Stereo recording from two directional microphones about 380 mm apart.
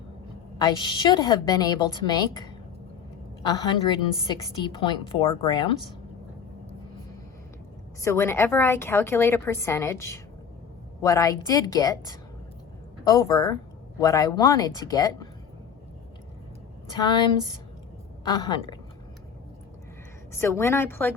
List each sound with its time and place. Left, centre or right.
0.6 s a woman's voice: centre
8.0 s a woman's voice: centre
13.1 s a woman's voice: centre
17.0 s a woman's voice: centre
18.3 s a woman's voice: centre
20.4 s a woman's voice: centre